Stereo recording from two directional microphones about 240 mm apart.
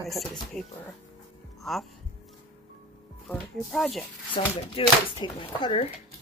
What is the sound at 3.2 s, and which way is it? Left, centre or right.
Speech, centre.